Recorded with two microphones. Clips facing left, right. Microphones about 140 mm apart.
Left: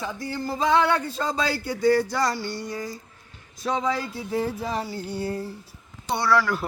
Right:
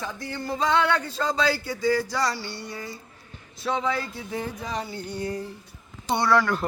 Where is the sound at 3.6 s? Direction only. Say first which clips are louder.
Left 1 dB; 30° left (ahead or behind).